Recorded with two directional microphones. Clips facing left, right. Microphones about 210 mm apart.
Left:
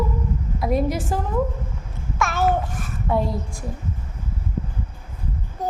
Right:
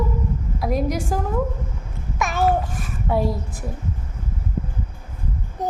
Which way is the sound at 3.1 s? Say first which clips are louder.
Right 1 dB; 5° right (ahead or behind).